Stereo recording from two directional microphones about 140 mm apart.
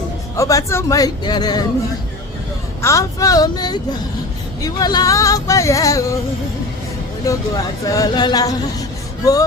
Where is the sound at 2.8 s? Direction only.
20° left (ahead or behind).